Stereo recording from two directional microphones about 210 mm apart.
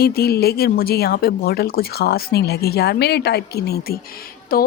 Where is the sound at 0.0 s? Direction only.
45° left (ahead or behind).